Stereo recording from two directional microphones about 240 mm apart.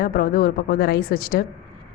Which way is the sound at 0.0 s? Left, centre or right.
Left.